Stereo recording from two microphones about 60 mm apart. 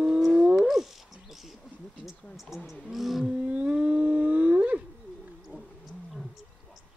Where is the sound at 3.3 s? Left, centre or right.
Right.